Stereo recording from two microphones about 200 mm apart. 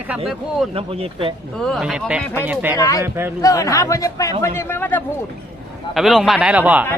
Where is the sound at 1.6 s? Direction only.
Centre (ahead or behind).